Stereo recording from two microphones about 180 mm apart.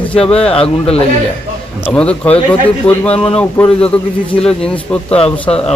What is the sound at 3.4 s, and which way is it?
Speech, 5° left (ahead or behind).